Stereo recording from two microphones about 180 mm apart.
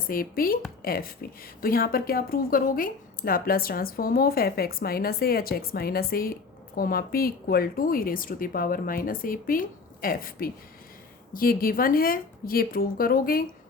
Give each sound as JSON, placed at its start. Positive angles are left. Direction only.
{"t": 0.1, "sound": "a woman's voice", "side_deg": 50}